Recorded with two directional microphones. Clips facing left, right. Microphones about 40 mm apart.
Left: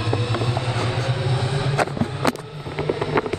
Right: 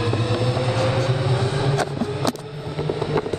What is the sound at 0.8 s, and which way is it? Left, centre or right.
Vehicle, right.